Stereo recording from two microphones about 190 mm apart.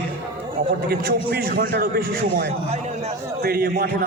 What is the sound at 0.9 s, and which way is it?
A man's voice, 50° right (ahead or behind).